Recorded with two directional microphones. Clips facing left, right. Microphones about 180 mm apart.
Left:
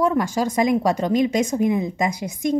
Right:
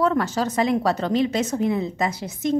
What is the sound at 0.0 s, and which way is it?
A woman's voice, 10° left (ahead or behind).